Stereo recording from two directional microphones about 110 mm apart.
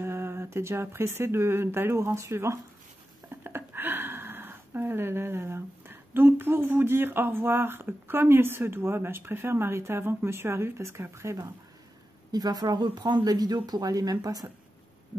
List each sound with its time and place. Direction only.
0.0 s speech: 20° right (ahead or behind)
12.3 s speech: 35° right (ahead or behind)